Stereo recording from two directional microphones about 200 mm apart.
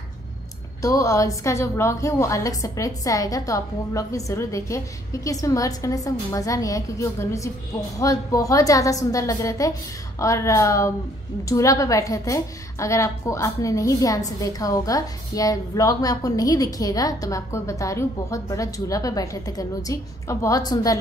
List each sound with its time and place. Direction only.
0.8 s a woman's voice: 15° left (ahead or behind)